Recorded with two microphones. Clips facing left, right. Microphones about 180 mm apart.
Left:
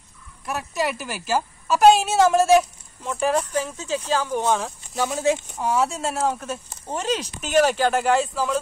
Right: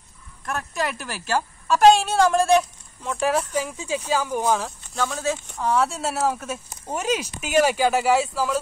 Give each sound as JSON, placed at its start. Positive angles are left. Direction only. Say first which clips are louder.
{"t": 0.5, "sound": "a woman's voice", "louder": "left 2 dB", "side_deg": 5}
{"t": 4.9, "sound": "speech", "louder": "left 4 dB", "side_deg": 20}
{"t": 5.5, "sound": "speech", "louder": "even", "side_deg": 5}